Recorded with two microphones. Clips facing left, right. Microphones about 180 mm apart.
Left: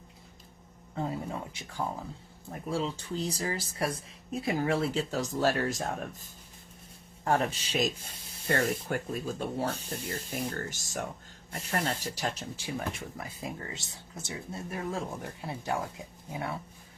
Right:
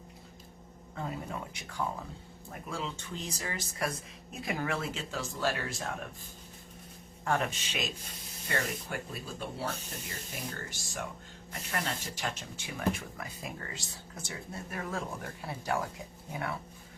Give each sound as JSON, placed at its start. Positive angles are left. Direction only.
{"t": 0.9, "sound": "speech", "side_deg": 25}
{"t": 7.3, "sound": "speech", "side_deg": 35}
{"t": 11.5, "sound": "speech", "side_deg": 30}